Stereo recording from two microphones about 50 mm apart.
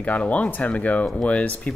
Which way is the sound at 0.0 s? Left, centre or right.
Left.